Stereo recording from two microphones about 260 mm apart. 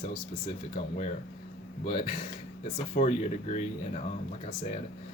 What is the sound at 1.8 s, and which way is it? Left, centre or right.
Speech, centre.